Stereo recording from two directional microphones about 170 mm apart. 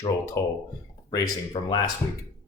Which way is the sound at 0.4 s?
20° left (ahead or behind).